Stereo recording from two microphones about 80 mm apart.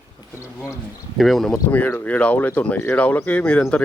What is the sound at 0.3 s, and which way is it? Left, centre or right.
Speech, left.